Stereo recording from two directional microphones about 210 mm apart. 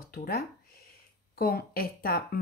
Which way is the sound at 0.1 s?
45° left (ahead or behind).